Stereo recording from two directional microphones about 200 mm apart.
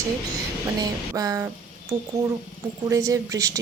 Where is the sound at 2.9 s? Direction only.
15° right (ahead or behind).